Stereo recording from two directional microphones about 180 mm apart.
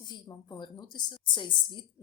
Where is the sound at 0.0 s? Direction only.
20° left (ahead or behind).